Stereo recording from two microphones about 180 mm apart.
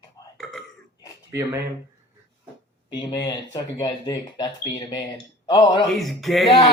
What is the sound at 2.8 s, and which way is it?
Speech, 25° left (ahead or behind).